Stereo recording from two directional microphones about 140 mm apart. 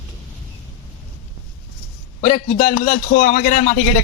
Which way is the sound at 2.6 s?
65° left (ahead or behind).